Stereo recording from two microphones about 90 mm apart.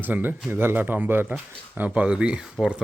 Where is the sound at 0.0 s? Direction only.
20° right (ahead or behind).